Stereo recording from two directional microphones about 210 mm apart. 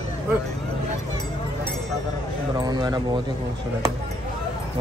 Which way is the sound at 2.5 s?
20° right (ahead or behind).